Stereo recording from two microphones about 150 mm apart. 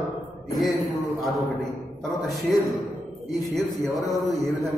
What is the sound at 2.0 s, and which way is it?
Speech, centre (ahead or behind).